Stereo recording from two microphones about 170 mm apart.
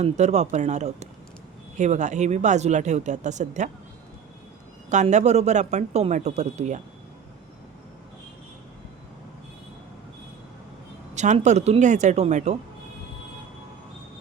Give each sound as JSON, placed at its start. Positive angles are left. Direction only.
{"t": 0.0, "sound": "speech", "side_deg": -40}
{"t": 4.9, "sound": "speech", "side_deg": -45}
{"t": 11.1, "sound": "speech", "side_deg": -45}